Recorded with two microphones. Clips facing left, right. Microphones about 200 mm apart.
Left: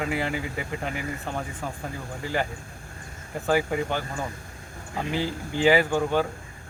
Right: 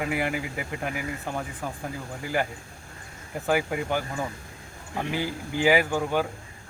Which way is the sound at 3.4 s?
5° right (ahead or behind).